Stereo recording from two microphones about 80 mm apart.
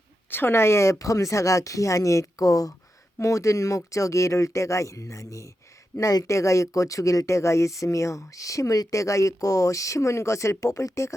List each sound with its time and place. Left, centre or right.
0.3 s speech: left